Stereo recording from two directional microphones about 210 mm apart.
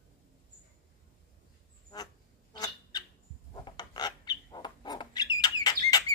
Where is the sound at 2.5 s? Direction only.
20° left (ahead or behind).